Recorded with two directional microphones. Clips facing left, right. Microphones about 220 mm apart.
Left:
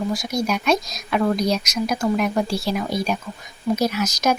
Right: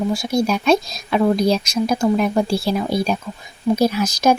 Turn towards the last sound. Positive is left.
turn(degrees=-30)  # may be behind; listen again after turning